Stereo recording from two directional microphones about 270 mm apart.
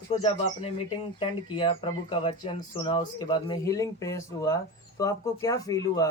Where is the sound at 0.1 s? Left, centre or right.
Centre.